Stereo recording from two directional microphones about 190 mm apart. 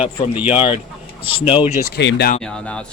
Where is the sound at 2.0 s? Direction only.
65° left (ahead or behind).